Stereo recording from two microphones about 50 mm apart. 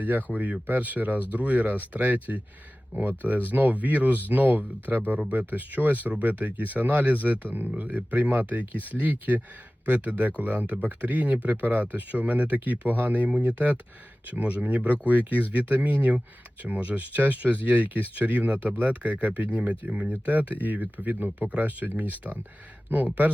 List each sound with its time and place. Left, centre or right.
0.0 s speech: right